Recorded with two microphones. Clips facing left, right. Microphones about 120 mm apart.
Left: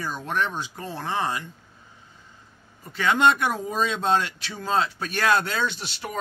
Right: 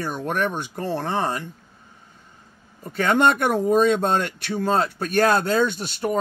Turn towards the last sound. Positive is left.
turn(degrees=-45)  # may be behind; listen again after turning